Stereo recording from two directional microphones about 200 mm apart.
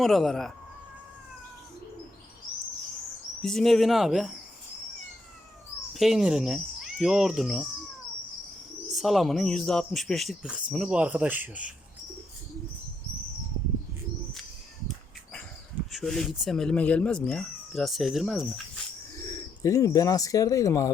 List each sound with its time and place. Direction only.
0.0 s speech: centre (ahead or behind)
3.4 s speech: centre (ahead or behind)
5.9 s speech: centre (ahead or behind)
9.0 s speech: centre (ahead or behind)
15.9 s speech: centre (ahead or behind)
19.6 s speech: 15° left (ahead or behind)